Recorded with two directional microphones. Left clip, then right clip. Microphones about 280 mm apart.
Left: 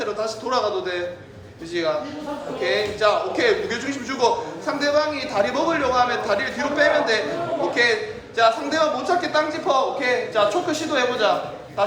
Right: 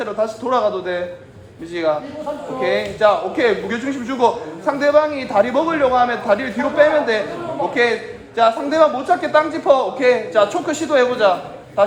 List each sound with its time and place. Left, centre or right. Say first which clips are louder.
0.0 s a man's voice: right 4 dB; right
8.4 s a man's voice: right 5 dB; right